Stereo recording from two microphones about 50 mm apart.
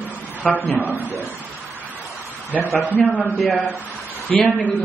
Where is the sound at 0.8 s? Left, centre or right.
Right.